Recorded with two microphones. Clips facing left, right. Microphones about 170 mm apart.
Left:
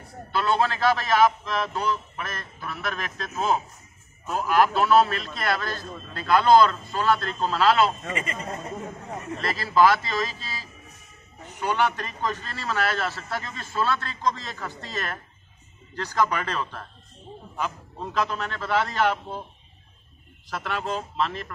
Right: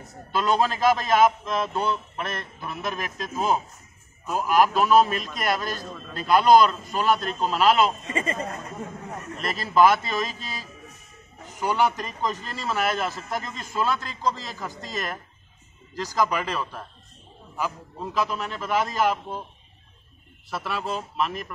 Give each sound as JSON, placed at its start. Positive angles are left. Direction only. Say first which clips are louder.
{"t": 0.3, "sound": "a man's voice", "louder": "right 1 dB", "side_deg": -15}
{"t": 8.1, "sound": "a man's voice", "louder": "right 3 dB", "side_deg": -30}
{"t": 9.4, "sound": "a man's voice", "louder": "right 1 dB", "side_deg": -20}
{"t": 11.6, "sound": "a man's voice", "louder": "right 1 dB", "side_deg": -10}
{"t": 18.1, "sound": "a man's voice", "louder": "even", "side_deg": -10}
{"t": 20.4, "sound": "a man's voice", "louder": "even", "side_deg": -5}